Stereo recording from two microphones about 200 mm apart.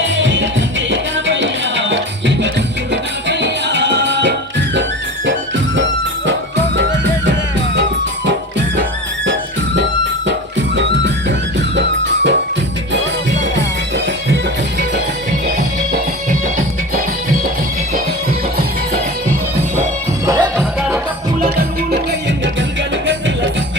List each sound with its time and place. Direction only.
0.0 s music: 65° right (ahead or behind)
10.8 s music: 65° right (ahead or behind)
13.4 s music: 60° right (ahead or behind)
20.2 s music: 15° right (ahead or behind)